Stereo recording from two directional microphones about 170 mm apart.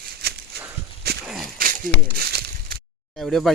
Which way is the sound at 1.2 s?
5° right (ahead or behind).